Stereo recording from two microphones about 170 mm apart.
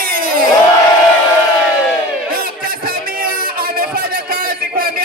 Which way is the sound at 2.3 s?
60° right (ahead or behind).